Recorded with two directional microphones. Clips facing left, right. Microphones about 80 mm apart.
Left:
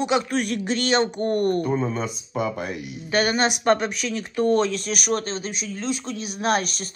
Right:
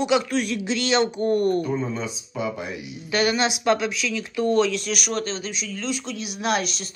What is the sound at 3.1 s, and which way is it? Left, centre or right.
Speech, left.